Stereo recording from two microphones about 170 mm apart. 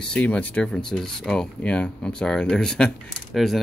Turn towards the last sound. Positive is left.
turn(degrees=0)  # may be behind; listen again after turning